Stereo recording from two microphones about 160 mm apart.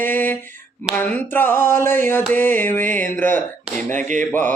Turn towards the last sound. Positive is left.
turn(degrees=10)  # may be behind; listen again after turning